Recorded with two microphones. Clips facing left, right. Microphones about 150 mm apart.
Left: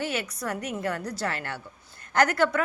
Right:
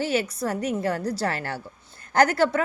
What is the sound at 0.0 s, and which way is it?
A woman's voice, 30° right (ahead or behind).